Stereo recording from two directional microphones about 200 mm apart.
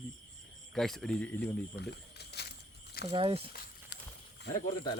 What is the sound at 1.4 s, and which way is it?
Speech, 55° left (ahead or behind).